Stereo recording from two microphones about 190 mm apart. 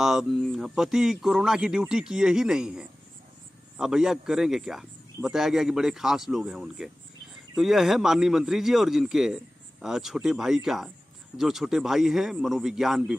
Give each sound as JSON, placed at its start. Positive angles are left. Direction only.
{"t": 0.0, "sound": "speech", "side_deg": 0}